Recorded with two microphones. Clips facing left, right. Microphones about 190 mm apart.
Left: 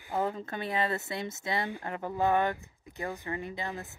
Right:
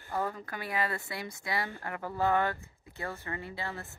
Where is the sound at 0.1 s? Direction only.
20° left (ahead or behind).